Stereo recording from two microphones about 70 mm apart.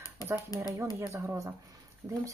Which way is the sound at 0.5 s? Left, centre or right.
Left.